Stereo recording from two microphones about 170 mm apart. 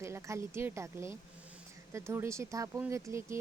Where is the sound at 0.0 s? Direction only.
15° right (ahead or behind).